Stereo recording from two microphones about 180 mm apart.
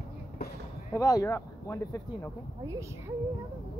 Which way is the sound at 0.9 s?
20° left (ahead or behind).